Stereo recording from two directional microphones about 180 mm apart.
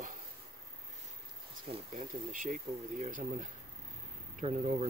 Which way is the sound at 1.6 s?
35° right (ahead or behind).